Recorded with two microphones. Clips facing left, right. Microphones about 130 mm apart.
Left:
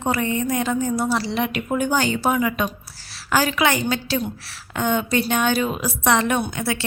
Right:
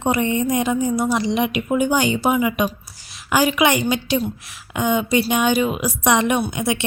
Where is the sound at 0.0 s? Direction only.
20° right (ahead or behind).